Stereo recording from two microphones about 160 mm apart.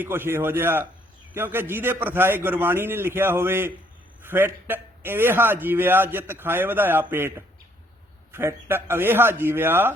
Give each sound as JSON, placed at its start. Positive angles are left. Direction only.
{"t": 0.0, "sound": "a man's voice", "side_deg": -15}